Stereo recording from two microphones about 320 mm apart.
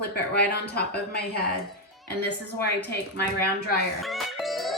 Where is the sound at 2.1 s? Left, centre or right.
Left.